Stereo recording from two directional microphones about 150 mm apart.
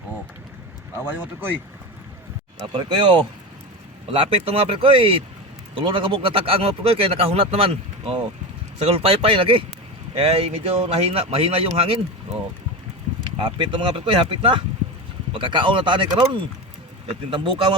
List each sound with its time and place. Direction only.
1.0 s speech: 10° right (ahead or behind)
2.7 s speech: 35° right (ahead or behind)
13.4 s speech: 30° right (ahead or behind)